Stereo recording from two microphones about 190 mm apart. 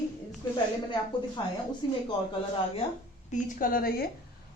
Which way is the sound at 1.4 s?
25° left (ahead or behind).